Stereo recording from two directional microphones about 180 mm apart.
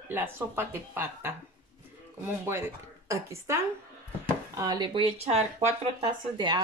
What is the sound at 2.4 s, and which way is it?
Speech, 15° right (ahead or behind).